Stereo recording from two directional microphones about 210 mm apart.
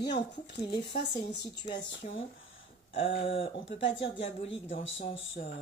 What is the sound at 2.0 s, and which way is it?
Speech, 35° left (ahead or behind).